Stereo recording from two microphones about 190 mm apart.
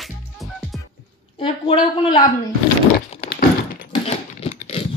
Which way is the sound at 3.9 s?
30° left (ahead or behind).